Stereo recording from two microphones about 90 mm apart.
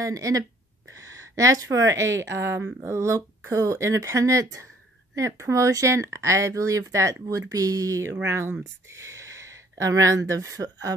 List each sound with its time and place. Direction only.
0.0 s speech: 40° right (ahead or behind)